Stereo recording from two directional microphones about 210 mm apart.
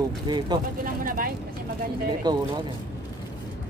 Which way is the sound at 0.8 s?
40° right (ahead or behind).